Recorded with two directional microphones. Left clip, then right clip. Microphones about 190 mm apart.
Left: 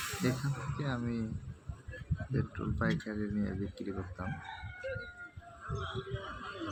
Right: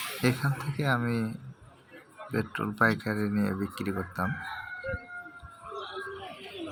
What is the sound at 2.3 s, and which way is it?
Speech, 20° right (ahead or behind).